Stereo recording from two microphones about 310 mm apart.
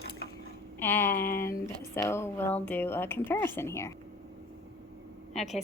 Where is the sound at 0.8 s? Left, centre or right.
Centre.